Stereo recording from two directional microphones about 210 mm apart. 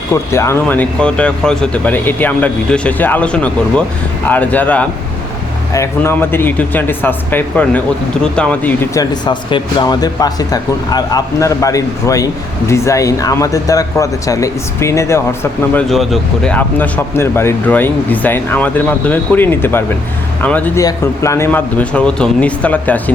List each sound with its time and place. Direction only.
0.1 s speech: 15° left (ahead or behind)
9.2 s speech: 20° left (ahead or behind)
15.9 s speech: centre (ahead or behind)